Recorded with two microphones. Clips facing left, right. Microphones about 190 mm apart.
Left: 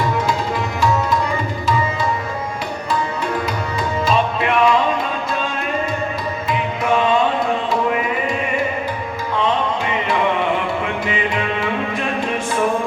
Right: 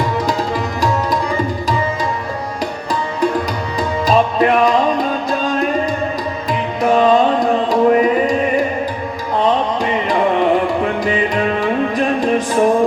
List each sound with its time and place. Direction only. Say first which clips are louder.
4.0 s music: right 6 dB; 40° right (ahead or behind)
11.0 s music: right 5 dB; 40° right (ahead or behind)